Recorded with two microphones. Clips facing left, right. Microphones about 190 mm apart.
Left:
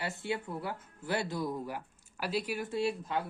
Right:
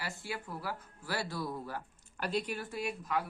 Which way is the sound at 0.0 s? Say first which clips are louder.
Left 5 dB; 25° left (ahead or behind).